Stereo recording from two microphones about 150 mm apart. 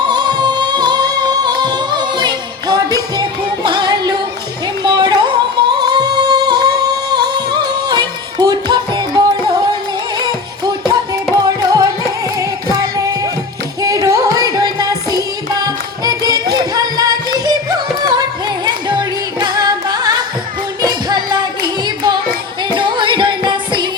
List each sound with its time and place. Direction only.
0.0 s music: 30° right (ahead or behind)